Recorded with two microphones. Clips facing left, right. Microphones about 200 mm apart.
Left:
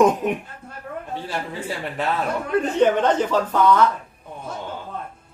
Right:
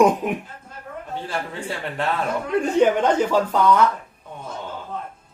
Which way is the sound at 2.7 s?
10° right (ahead or behind).